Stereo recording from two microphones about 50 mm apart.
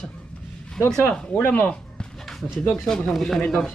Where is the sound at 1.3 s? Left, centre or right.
Left.